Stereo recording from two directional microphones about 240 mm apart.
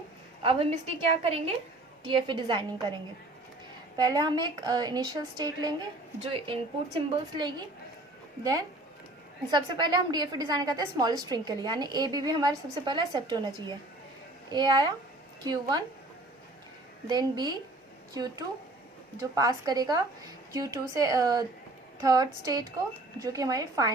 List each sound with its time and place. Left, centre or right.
0.4 s a woman's voice: right
3.9 s a woman's voice: centre
9.5 s a woman's voice: centre
14.5 s a woman's voice: centre
17.1 s a woman's voice: centre